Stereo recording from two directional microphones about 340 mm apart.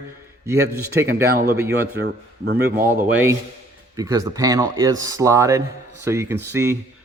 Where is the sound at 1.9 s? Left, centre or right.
Right.